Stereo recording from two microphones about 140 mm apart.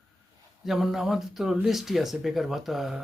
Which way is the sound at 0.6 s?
Centre (ahead or behind).